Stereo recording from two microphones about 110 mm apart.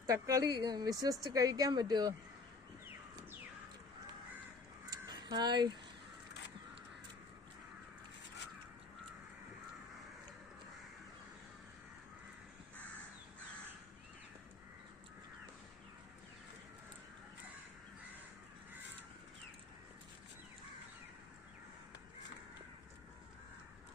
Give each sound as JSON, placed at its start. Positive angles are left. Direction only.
{"t": 0.0, "sound": "a woman's voice", "side_deg": -30}
{"t": 4.9, "sound": "crow", "side_deg": -40}